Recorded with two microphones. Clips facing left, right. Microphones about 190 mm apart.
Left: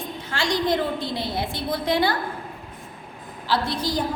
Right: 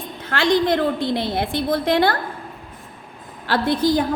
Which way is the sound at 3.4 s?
55° right (ahead or behind).